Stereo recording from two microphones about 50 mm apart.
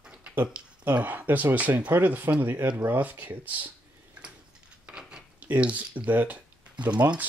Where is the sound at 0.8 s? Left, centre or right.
Right.